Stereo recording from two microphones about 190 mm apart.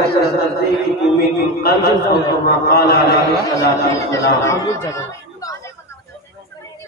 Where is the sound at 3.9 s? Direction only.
15° left (ahead or behind).